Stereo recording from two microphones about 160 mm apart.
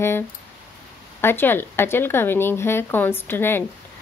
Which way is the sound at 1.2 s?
15° left (ahead or behind).